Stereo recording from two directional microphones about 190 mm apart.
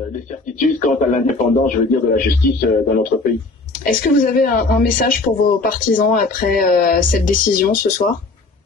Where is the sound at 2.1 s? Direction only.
55° left (ahead or behind).